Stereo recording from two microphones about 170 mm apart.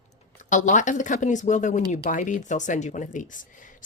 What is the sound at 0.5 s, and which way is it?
Speech, 45° left (ahead or behind).